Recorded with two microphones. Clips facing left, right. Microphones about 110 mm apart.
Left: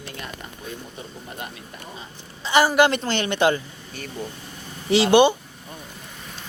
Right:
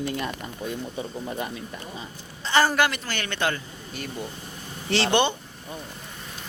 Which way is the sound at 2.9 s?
25° left (ahead or behind).